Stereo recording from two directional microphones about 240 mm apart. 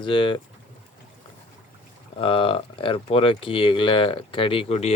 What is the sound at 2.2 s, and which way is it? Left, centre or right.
Speech, left.